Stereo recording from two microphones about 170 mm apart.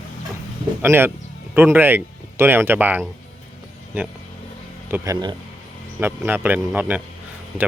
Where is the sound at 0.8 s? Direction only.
15° right (ahead or behind).